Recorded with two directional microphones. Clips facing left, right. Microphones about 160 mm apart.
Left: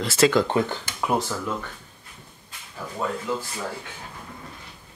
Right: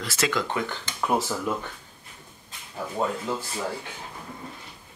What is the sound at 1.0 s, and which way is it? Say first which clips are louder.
Speech: even; 5° right (ahead or behind).